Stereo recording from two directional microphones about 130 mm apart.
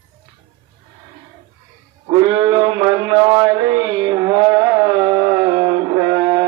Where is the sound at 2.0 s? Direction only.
30° right (ahead or behind).